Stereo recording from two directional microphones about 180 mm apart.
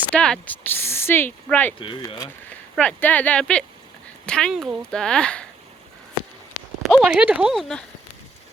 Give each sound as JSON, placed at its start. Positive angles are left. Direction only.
{"t": 0.1, "sound": "speech", "side_deg": 5}
{"t": 1.8, "sound": "speech", "side_deg": 30}
{"t": 2.5, "sound": "speech", "side_deg": 5}
{"t": 6.8, "sound": "speech", "side_deg": -5}